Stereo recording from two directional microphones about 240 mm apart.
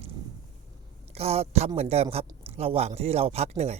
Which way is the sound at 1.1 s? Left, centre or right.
Right.